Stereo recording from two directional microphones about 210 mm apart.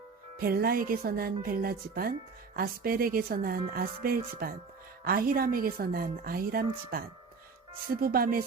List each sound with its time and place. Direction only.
0.4 s speech: 45° right (ahead or behind)
8.0 s speech: 45° right (ahead or behind)